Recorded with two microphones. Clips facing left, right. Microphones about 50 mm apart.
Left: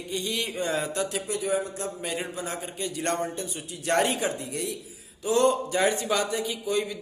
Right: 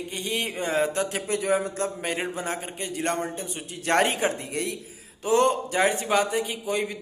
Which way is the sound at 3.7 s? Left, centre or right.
Right.